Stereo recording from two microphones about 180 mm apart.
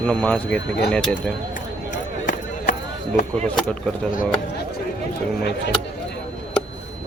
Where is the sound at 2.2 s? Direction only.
45° left (ahead or behind).